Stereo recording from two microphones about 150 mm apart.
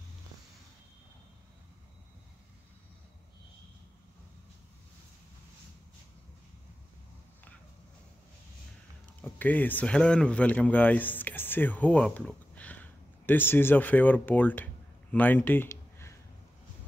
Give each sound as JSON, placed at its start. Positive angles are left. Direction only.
{"t": 9.4, "sound": "a man's voice", "side_deg": 10}